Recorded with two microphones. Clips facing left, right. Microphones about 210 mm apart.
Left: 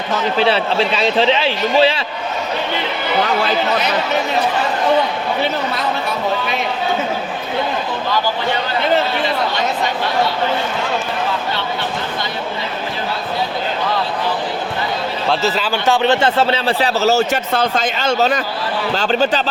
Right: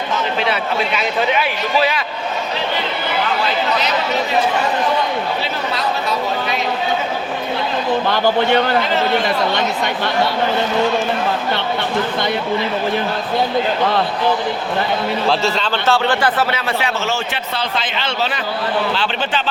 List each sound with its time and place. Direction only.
0.3 s a man's voice: 30° left (ahead or behind)
15.3 s a man's voice: centre (ahead or behind)
15.9 s a man's voice: 25° left (ahead or behind); by 19.4 s 40° left (ahead or behind)